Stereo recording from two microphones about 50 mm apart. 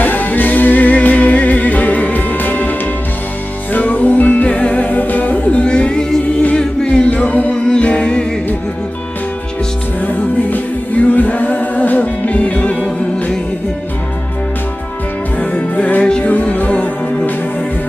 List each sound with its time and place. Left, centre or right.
0.0 s music: left
3.7 s music: left
10.0 s a capella: left
15.3 s music: left
16.0 s music: centre
16.3 s music: left